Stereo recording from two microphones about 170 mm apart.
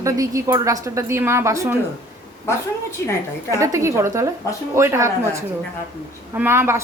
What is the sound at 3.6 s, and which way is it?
A woman's voice, 15° right (ahead or behind).